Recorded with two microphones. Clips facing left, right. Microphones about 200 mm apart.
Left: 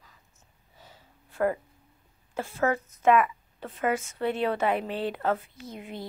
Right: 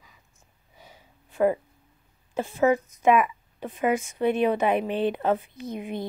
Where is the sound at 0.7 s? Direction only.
15° right (ahead or behind).